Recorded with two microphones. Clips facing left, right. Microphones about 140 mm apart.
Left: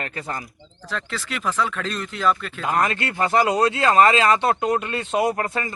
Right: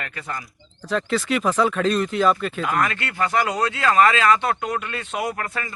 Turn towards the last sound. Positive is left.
turn(degrees=25)  # may be behind; listen again after turning